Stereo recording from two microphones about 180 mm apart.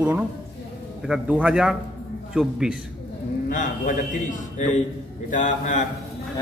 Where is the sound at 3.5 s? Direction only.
45° left (ahead or behind).